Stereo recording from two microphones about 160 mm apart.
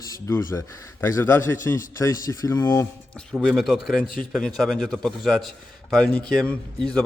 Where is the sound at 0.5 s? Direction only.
20° left (ahead or behind).